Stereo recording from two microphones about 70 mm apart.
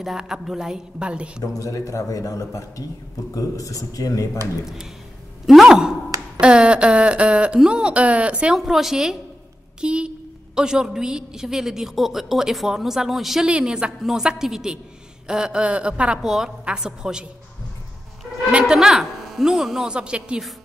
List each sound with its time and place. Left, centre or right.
0.0 s a woman's voice: centre
1.4 s a man's voice: left
5.5 s a woman's voice: centre
8.5 s a woman's voice: centre
13.5 s a woman's voice: centre
18.5 s a woman's voice: centre